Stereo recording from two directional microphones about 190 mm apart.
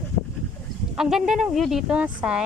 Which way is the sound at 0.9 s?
Centre (ahead or behind).